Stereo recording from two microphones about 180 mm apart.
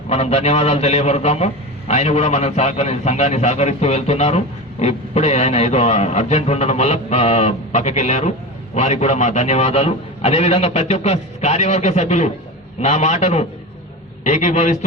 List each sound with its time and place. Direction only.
0.1 s a man's voice: 35° left (ahead or behind)